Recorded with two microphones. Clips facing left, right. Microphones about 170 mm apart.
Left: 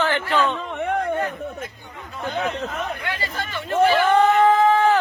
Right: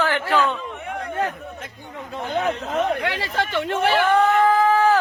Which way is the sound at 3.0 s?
90° right.